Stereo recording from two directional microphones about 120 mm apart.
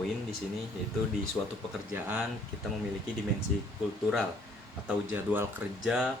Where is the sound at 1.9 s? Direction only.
15° right (ahead or behind).